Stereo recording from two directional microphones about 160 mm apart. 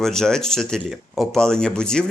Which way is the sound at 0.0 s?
5° left (ahead or behind).